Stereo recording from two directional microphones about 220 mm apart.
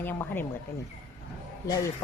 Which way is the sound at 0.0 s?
10° left (ahead or behind).